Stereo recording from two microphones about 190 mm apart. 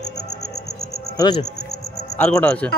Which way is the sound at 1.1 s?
20° left (ahead or behind).